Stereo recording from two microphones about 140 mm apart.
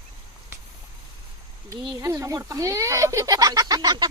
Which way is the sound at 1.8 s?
25° right (ahead or behind).